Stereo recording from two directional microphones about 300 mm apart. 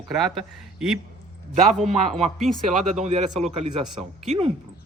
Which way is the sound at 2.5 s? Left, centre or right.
Right.